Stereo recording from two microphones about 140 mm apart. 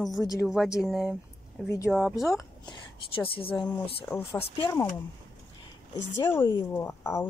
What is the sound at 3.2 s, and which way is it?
Speech, 40° left (ahead or behind).